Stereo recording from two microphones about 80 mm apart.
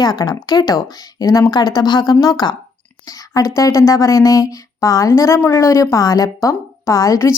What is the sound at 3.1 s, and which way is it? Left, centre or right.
Speech, left.